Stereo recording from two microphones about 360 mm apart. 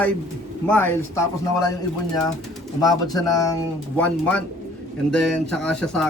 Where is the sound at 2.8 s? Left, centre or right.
Centre.